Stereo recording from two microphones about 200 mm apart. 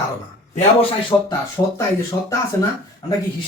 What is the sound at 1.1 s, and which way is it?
Speech, 20° left (ahead or behind).